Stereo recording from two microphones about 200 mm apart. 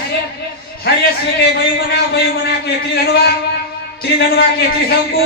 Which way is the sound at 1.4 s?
50° left (ahead or behind).